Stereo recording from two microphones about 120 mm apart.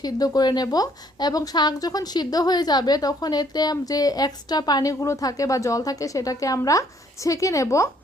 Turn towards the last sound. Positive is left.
turn(degrees=25)  # may be behind; listen again after turning